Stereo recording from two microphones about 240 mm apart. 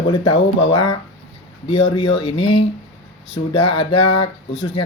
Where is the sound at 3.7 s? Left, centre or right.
Left.